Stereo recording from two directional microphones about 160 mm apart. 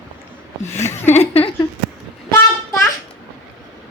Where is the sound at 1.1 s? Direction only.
40° left (ahead or behind).